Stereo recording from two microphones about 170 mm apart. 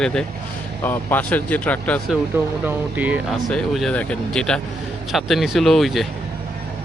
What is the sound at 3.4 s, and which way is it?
Speech, centre (ahead or behind).